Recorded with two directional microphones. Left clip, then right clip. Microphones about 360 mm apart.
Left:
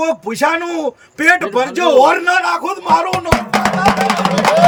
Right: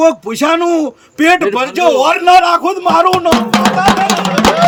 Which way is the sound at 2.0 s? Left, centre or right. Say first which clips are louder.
Right 3 dB; centre.